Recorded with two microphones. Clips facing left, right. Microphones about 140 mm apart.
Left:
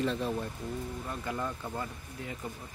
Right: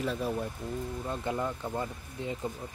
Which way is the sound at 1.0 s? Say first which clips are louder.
Right 4 dB; 25° right (ahead or behind).